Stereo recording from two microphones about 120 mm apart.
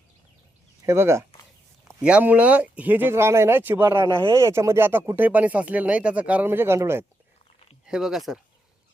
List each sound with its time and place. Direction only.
0.9 s speech: 20° right (ahead or behind)
2.0 s speech: 10° right (ahead or behind)
7.9 s speech: 5° right (ahead or behind)